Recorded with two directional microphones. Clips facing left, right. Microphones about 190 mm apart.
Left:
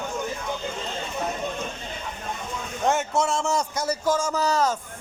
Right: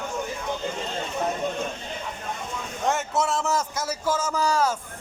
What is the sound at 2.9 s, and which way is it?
A man's voice, centre (ahead or behind).